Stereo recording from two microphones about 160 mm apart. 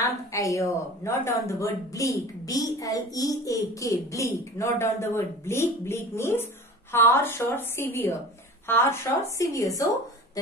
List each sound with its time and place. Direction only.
0.0 s a woman's voice: 20° left (ahead or behind)